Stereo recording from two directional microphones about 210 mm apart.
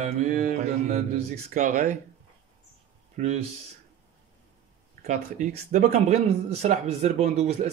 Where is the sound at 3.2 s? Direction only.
35° right (ahead or behind).